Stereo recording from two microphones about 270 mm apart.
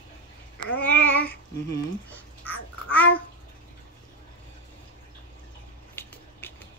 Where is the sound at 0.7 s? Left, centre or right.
Centre.